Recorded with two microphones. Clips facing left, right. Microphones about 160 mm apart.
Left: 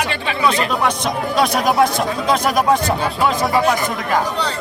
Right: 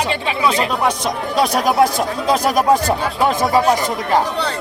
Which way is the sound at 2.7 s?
35° right (ahead or behind).